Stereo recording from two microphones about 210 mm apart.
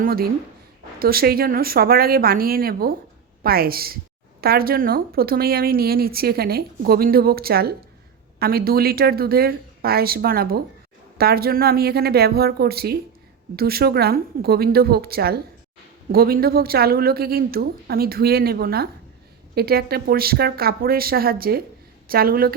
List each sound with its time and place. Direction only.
0.0 s a woman's voice: 45° right (ahead or behind)